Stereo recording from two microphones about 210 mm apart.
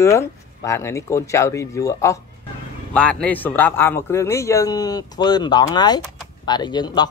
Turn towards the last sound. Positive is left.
turn(degrees=20)  # may be behind; listen again after turning